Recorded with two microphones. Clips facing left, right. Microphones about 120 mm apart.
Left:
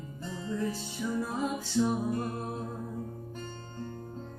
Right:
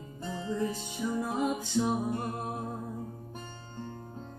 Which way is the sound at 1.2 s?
15° right (ahead or behind).